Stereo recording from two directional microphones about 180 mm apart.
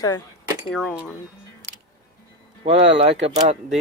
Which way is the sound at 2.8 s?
75° right (ahead or behind).